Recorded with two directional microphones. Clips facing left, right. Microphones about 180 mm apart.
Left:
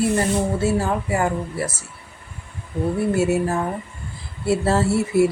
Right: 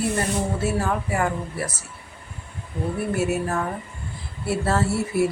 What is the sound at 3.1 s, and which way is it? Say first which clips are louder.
A woman's voice: left 3 dB; 25° left (ahead or behind).